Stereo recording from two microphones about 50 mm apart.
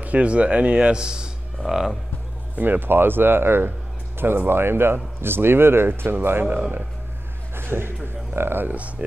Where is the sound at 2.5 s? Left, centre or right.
Right.